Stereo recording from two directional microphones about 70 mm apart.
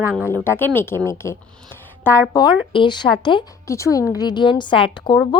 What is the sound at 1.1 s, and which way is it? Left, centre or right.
Speech, left.